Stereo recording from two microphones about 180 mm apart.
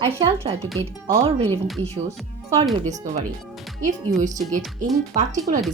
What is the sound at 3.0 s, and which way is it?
A woman's voice, 40° right (ahead or behind).